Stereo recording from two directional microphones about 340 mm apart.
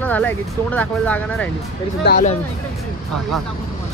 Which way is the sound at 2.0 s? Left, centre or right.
Left.